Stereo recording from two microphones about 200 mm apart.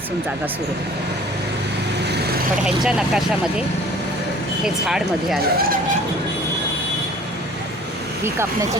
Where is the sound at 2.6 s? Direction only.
5° right (ahead or behind).